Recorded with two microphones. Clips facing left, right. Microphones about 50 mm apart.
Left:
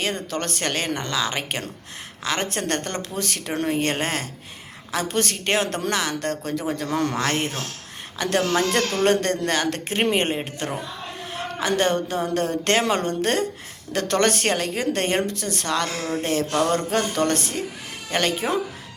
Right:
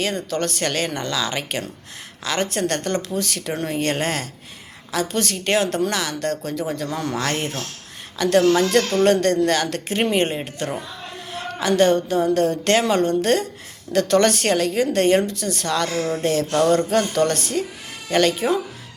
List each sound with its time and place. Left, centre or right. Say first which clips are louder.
0.0 s a woman's voice: right 3 dB; left
7.1 s a woman's voice: even; left